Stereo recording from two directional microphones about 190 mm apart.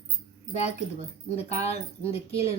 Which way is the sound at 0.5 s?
35° left (ahead or behind).